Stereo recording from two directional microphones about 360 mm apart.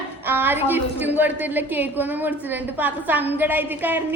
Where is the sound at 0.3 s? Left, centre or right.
Centre.